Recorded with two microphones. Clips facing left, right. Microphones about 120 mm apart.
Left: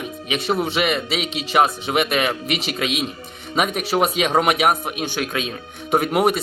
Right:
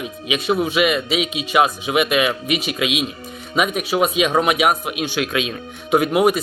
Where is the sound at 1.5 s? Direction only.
45° left (ahead or behind).